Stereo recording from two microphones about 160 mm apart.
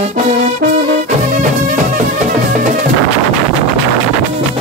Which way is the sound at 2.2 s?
50° right (ahead or behind).